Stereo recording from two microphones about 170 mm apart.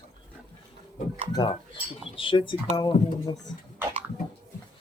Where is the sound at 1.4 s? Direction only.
20° left (ahead or behind).